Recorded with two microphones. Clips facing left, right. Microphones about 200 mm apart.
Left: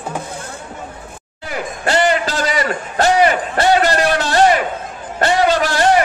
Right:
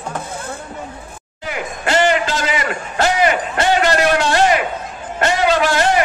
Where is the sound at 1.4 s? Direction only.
40° left (ahead or behind).